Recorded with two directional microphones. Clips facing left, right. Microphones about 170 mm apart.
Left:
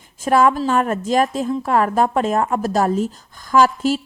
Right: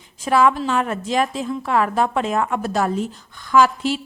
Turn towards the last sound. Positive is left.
turn(degrees=45)  # may be behind; listen again after turning